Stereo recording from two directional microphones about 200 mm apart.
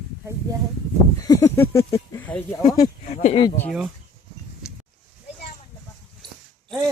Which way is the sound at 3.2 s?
30° left (ahead or behind).